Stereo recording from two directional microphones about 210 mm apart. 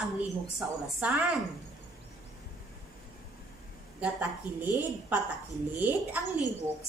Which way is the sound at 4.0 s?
5° right (ahead or behind).